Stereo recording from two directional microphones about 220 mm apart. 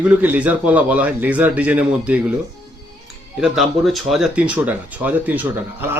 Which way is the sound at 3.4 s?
Centre (ahead or behind).